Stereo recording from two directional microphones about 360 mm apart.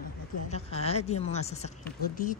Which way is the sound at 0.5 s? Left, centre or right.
Centre.